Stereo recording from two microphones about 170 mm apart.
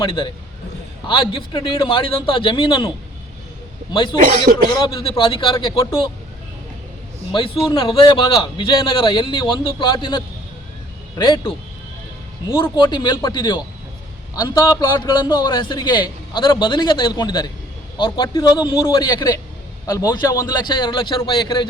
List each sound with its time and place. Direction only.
0.0 s a man's voice: 30° left (ahead or behind)
3.9 s a man's voice: 30° left (ahead or behind)
4.2 s speech: 50° right (ahead or behind)
4.8 s a man's voice: 30° left (ahead or behind)
7.7 s a man's voice: 30° left (ahead or behind)
12.7 s a man's voice: 25° left (ahead or behind)